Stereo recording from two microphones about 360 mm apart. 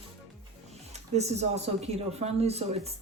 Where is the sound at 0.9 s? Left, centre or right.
Centre.